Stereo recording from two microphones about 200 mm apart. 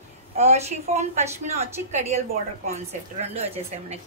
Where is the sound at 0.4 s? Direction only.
35° right (ahead or behind).